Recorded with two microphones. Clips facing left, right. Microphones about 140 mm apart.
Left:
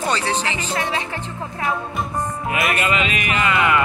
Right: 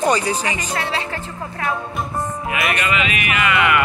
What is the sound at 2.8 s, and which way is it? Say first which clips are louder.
Speech: even; 35° left (ahead or behind).